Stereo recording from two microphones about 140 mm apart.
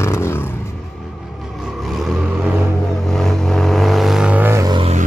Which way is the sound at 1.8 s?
Centre (ahead or behind).